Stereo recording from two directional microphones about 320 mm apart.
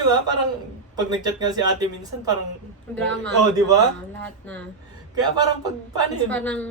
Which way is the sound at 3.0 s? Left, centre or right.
Right.